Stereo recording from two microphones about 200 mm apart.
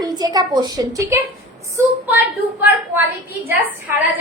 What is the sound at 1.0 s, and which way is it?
Speech, 15° right (ahead or behind).